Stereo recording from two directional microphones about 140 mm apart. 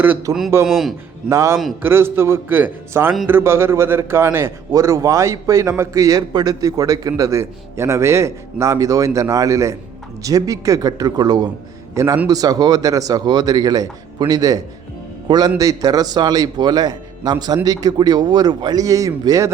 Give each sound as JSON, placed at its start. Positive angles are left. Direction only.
{"t": 0.3, "sound": "a man's voice", "side_deg": -25}
{"t": 0.6, "sound": "a man's voice", "side_deg": 0}
{"t": 1.3, "sound": "a man's voice", "side_deg": -20}
{"t": 11.9, "sound": "a man's voice", "side_deg": -15}